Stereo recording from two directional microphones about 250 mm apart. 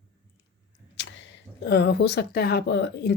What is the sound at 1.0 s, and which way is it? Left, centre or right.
Speech, left.